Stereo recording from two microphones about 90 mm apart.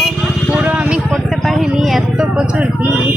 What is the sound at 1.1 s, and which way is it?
Vehicle, centre (ahead or behind).